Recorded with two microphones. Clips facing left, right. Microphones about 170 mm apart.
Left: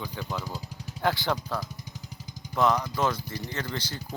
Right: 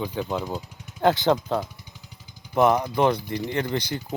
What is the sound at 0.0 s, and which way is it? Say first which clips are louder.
Speech: right 7 dB; 25° right (ahead or behind).